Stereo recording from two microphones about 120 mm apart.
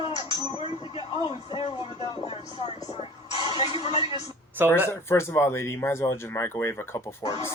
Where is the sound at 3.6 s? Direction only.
60° left (ahead or behind).